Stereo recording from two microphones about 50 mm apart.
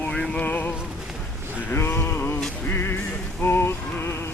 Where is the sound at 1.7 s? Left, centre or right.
Left.